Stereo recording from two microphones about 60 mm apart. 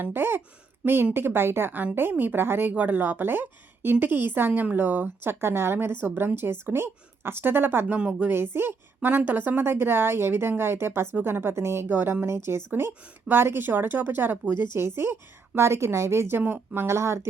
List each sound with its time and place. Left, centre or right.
0.0 s speech: right
7.9 s a woman's voice: centre
8.3 s speech: right
11.9 s speech: right
12.2 s speech: right
16.4 s speech: right
16.8 s speech: right